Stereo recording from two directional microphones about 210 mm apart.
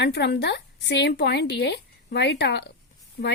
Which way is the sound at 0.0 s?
55° left (ahead or behind).